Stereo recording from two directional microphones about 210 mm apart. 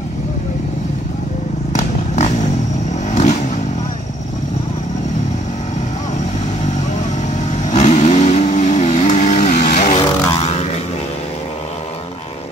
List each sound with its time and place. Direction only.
1.8 s vehicle: 35° left (ahead or behind)
7.5 s vehicle: 35° left (ahead or behind)